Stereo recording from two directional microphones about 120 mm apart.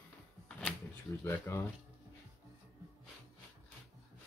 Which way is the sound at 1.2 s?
25° left (ahead or behind).